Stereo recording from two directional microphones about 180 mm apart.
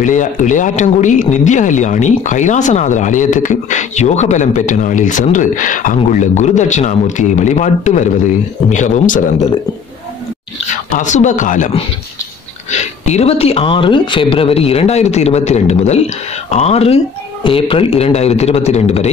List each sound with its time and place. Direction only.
0.0 s speech: 45° left (ahead or behind)
11.0 s speech: 40° left (ahead or behind)
13.0 s speech: 35° left (ahead or behind)